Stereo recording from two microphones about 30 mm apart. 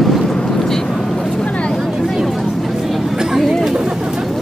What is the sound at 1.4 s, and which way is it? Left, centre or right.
Vehicle, left.